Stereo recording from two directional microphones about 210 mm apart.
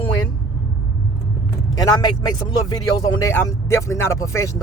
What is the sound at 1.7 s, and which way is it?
Speech, 20° left (ahead or behind).